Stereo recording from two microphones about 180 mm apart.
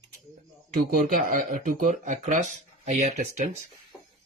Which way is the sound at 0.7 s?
50° right (ahead or behind).